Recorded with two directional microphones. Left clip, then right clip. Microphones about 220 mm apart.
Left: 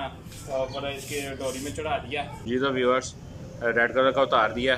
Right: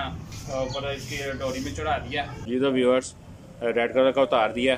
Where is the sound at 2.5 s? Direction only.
10° right (ahead or behind).